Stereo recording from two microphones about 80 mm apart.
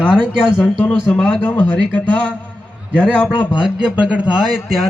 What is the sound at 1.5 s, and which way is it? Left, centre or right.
Speech, left.